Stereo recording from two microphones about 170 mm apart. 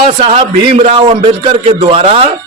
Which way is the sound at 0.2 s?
35° right (ahead or behind).